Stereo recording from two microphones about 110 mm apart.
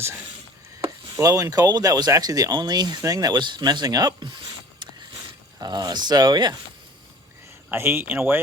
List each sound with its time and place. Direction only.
0.0 s speech: 20° right (ahead or behind); by 4.4 s 40° right (ahead or behind)
4.8 s a sound: 40° right (ahead or behind)
5.5 s speech: 35° right (ahead or behind)
7.7 s speech: 20° right (ahead or behind)